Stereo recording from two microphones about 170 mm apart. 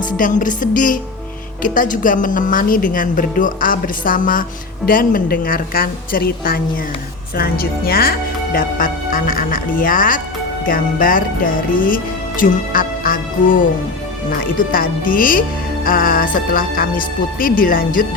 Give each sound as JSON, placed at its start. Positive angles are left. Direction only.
{"t": 0.2, "sound": "a woman's voice", "side_deg": 50}